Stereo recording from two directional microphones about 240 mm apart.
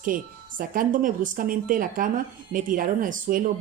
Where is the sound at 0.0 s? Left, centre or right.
Right.